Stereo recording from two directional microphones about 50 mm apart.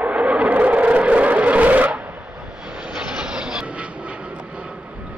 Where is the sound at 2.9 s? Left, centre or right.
Centre.